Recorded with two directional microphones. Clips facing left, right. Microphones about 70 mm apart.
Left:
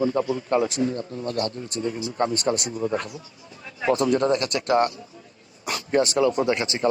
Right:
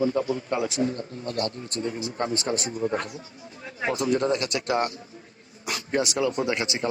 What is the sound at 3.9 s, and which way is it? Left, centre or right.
Speech, left.